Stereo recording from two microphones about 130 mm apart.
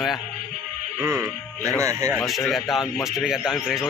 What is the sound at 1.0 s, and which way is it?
Speech, 20° right (ahead or behind).